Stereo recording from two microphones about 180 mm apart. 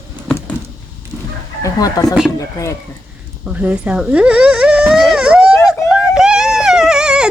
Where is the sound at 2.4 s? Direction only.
20° left (ahead or behind).